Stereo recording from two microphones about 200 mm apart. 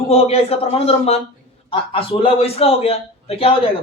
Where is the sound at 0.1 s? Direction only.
30° left (ahead or behind).